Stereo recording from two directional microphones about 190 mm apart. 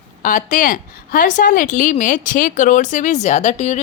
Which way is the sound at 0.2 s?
45° left (ahead or behind).